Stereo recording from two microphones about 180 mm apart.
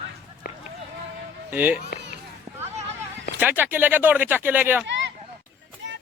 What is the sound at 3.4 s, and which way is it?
Speech, 10° right (ahead or behind).